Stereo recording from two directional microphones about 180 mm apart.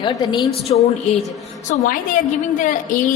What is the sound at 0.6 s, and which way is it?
Speech, 35° left (ahead or behind).